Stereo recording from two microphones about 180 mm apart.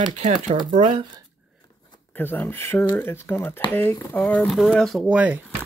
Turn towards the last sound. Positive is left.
turn(degrees=-5)  # may be behind; listen again after turning